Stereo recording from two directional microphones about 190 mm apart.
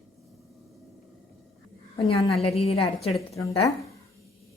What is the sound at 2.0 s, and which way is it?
A woman's voice, 30° left (ahead or behind).